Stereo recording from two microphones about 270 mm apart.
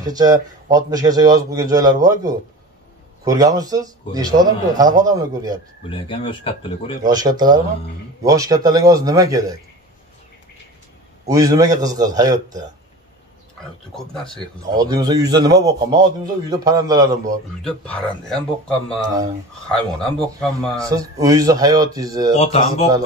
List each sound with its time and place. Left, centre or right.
0.0 s speech: centre
5.9 s speech: centre
7.0 s speech: centre
11.2 s speech: centre
13.9 s speech: centre
14.8 s speech: centre
17.6 s speech: centre
20.8 s speech: centre
22.3 s speech: left